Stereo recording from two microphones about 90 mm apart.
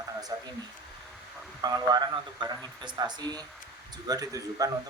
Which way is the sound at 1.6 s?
50° right (ahead or behind).